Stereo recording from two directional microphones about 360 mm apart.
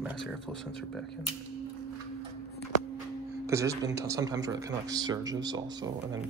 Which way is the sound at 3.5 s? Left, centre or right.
Centre.